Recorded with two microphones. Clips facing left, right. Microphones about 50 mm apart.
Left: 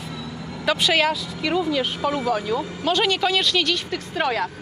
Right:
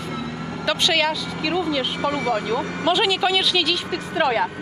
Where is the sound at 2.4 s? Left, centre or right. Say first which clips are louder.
Right 2 dB; right.